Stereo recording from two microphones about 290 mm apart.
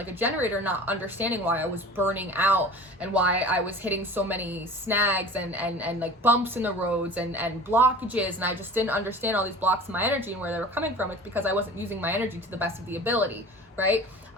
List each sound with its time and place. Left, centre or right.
0.0 s a woman's voice: centre